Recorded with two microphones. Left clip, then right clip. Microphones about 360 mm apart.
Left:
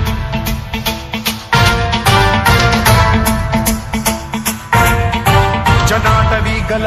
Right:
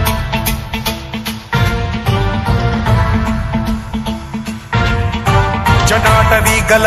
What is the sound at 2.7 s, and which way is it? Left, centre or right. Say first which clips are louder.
Music: left 6 dB; left.